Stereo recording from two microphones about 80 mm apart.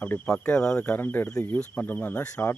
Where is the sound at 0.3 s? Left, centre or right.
Centre.